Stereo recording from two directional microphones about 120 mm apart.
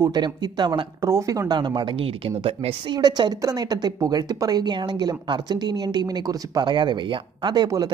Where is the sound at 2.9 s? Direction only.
35° right (ahead or behind).